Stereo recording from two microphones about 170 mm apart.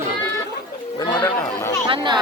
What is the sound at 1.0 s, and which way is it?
Speech, 20° left (ahead or behind).